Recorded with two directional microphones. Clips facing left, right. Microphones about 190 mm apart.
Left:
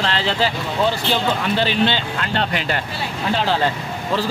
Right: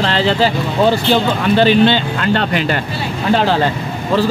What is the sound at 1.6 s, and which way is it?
Speech, 55° right (ahead or behind).